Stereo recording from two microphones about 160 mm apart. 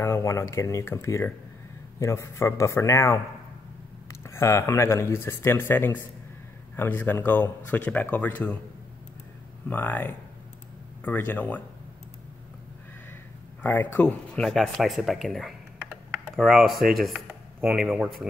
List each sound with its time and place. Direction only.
0.0 s speech: 15° left (ahead or behind)
9.7 s speech: 10° left (ahead or behind)
13.6 s speech: 10° left (ahead or behind); by 18.1 s 5° right (ahead or behind)